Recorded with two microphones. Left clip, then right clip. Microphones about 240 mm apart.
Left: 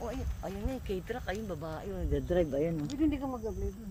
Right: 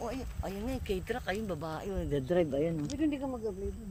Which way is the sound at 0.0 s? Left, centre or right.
Right.